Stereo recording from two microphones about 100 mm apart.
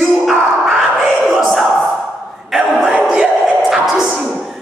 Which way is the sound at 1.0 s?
5° right (ahead or behind).